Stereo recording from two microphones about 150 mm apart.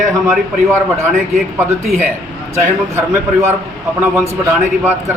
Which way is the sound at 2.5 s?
15° right (ahead or behind).